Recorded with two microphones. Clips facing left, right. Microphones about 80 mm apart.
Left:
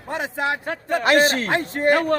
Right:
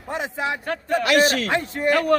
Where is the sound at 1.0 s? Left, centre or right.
Left.